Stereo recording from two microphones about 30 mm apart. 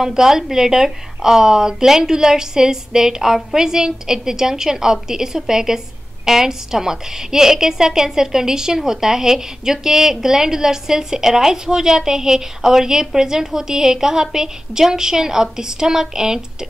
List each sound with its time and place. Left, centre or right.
0.0 s a woman's voice: centre